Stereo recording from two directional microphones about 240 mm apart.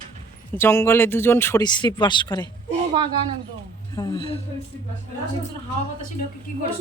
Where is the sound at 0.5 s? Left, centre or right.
Centre.